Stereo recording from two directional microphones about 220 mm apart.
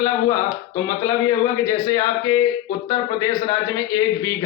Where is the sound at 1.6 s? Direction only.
15° left (ahead or behind).